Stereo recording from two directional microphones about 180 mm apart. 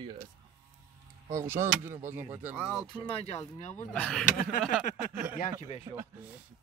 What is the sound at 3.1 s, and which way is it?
Speech, 35° left (ahead or behind).